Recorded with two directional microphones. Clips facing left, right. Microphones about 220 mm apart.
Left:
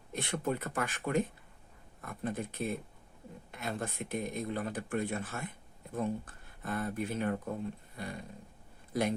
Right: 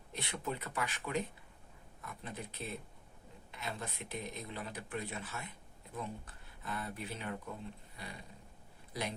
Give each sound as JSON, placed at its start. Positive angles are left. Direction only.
{"t": 0.1, "sound": "speech", "side_deg": 50}